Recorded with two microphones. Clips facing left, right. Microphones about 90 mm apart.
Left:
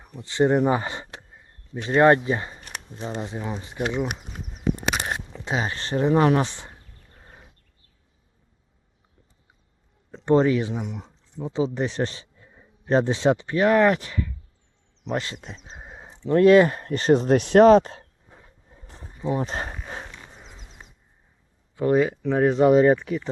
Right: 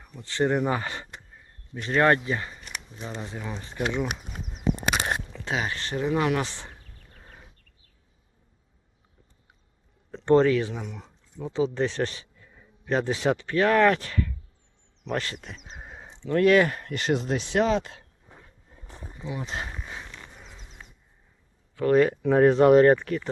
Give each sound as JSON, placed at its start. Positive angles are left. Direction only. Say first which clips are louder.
{"t": 0.2, "sound": "speech", "louder": "left 5 dB", "side_deg": 20}
{"t": 2.6, "sound": "a sound", "louder": "left 2 dB", "side_deg": 45}
{"t": 3.2, "sound": "speech", "louder": "left 4 dB", "side_deg": 20}
{"t": 5.3, "sound": "speech", "louder": "left 2 dB", "side_deg": 25}
{"t": 6.4, "sound": "speech", "louder": "left 5 dB", "side_deg": 15}
{"t": 10.2, "sound": "speech", "louder": "even", "side_deg": 15}
{"t": 15.0, "sound": "speech", "louder": "left 2 dB", "side_deg": 20}
{"t": 15.8, "sound": "sheep", "louder": "left 3 dB", "side_deg": 15}
{"t": 16.3, "sound": "speech", "louder": "left 5 dB", "side_deg": 25}
{"t": 17.3, "sound": "speech", "louder": "left 12 dB", "side_deg": 55}
{"t": 19.2, "sound": "speech", "louder": "left 7 dB", "side_deg": 40}
{"t": 20.2, "sound": "a sound", "louder": "left 1 dB", "side_deg": 20}
{"t": 21.9, "sound": "speech", "louder": "right 3 dB", "side_deg": 5}